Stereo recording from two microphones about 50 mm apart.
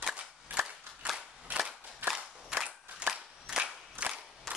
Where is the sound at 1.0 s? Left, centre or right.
Right.